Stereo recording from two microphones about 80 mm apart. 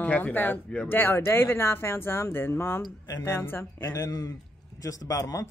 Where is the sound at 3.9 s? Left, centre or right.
Left.